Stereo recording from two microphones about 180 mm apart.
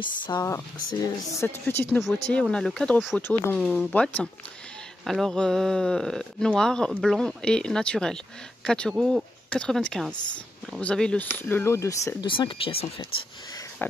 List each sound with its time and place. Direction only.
0.0 s speech: 20° left (ahead or behind); by 3.2 s centre (ahead or behind)
3.2 s speech: 15° left (ahead or behind)
12.3 s speech: 30° left (ahead or behind)